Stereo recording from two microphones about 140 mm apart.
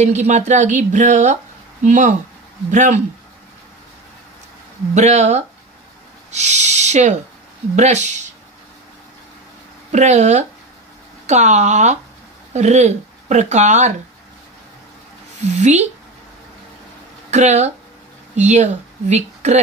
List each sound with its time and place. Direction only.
0.0 s a woman's voice: 55° right (ahead or behind)
4.9 s a woman's voice: 55° right (ahead or behind)
9.9 s a woman's voice: 55° right (ahead or behind)
15.5 s a woman's voice: 55° right (ahead or behind)
17.3 s speech: 55° right (ahead or behind)